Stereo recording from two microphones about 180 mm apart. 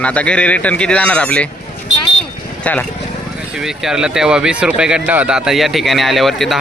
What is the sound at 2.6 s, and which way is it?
Speech, 10° left (ahead or behind).